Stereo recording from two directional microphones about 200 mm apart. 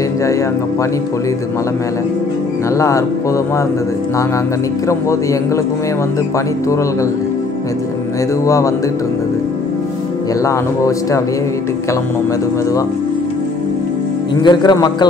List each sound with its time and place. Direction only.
8.5 s speech: 15° left (ahead or behind)
14.4 s speech: 20° left (ahead or behind)